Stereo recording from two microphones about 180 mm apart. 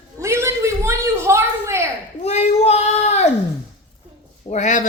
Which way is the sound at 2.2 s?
35° left (ahead or behind).